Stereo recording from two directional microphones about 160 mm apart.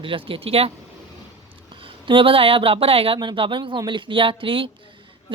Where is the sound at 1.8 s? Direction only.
30° right (ahead or behind).